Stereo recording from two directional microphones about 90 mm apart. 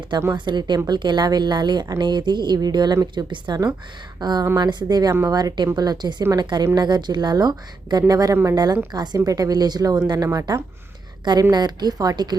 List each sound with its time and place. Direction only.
0.3 s a woman's voice: 55° right (ahead or behind)